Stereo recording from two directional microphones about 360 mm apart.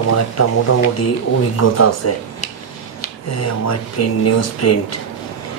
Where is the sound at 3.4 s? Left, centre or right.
Left.